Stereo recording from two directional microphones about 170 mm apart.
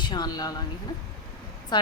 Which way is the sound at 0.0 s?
25° left (ahead or behind).